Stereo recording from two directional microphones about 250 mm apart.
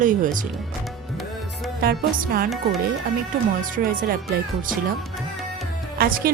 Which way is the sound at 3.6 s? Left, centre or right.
Right.